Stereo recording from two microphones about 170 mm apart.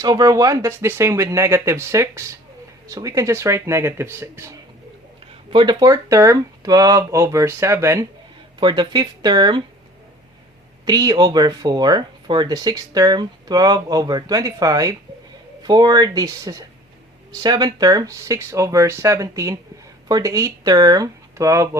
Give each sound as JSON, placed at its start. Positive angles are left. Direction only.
{"t": 0.0, "sound": "speech", "side_deg": -20}
{"t": 5.5, "sound": "speech", "side_deg": -25}
{"t": 10.8, "sound": "speech", "side_deg": -20}